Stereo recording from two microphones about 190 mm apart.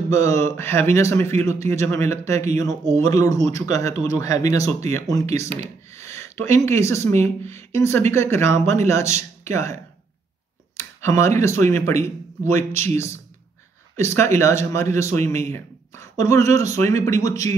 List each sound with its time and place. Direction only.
0.1 s speech: 15° left (ahead or behind)
5.5 s a sound: 35° right (ahead or behind)
5.9 s speech: 15° left (ahead or behind)
10.8 s speech: 15° left (ahead or behind)